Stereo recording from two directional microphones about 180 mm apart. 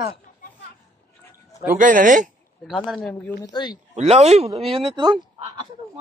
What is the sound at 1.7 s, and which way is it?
Speech, 45° right (ahead or behind).